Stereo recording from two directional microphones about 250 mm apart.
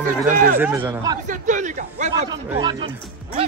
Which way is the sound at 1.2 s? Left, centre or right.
Right.